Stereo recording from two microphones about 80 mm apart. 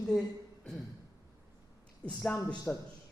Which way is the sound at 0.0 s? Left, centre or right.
Centre.